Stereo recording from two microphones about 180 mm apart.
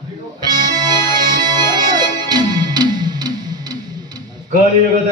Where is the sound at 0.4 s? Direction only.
20° right (ahead or behind).